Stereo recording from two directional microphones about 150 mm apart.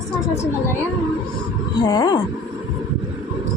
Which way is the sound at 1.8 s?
25° left (ahead or behind).